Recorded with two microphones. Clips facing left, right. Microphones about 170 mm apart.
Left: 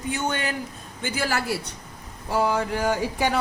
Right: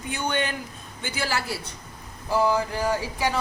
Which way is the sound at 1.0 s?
45° left (ahead or behind).